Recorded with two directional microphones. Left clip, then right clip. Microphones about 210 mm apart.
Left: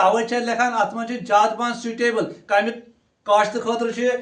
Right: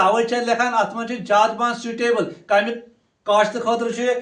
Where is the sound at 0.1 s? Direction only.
15° left (ahead or behind).